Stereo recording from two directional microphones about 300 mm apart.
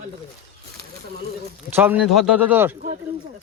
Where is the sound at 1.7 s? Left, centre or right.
Centre.